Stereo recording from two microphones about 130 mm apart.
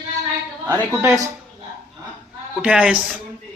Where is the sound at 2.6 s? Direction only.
10° right (ahead or behind).